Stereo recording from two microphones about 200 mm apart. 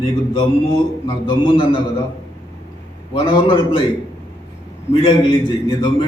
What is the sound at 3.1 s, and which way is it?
Speech, 25° left (ahead or behind).